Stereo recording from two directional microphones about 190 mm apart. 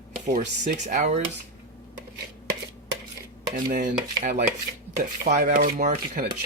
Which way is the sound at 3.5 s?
45° right (ahead or behind).